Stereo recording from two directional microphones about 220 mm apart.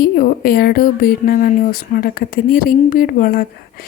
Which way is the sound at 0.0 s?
45° left (ahead or behind).